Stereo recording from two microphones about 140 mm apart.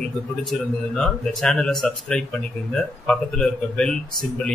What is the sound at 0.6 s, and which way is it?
A man's voice, 5° left (ahead or behind).